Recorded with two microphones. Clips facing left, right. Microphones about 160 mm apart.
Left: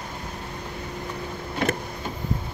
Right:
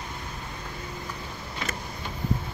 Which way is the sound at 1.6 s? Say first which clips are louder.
Left 10 dB; 55° left (ahead or behind).